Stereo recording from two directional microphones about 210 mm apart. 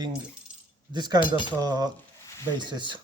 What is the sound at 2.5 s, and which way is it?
Speech, 20° right (ahead or behind).